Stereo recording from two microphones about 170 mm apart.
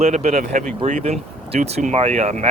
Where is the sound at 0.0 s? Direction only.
45° right (ahead or behind).